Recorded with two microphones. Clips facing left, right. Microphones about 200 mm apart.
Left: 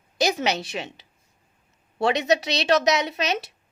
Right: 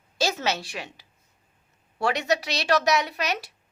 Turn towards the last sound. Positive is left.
turn(degrees=20)  # may be behind; listen again after turning